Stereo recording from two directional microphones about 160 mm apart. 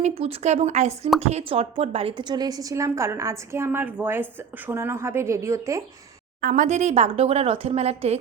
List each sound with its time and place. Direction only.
0.2 s a woman's voice: 40° right (ahead or behind); by 5.8 s 20° right (ahead or behind)
6.4 s speech: 55° right (ahead or behind)